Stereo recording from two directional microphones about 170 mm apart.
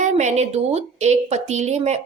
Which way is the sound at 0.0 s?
45° right (ahead or behind).